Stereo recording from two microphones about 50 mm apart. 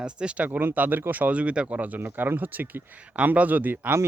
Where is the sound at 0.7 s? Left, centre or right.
Right.